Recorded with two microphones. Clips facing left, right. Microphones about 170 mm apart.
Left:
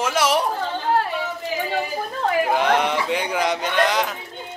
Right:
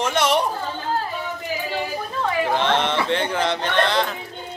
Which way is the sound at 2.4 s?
10° left (ahead or behind).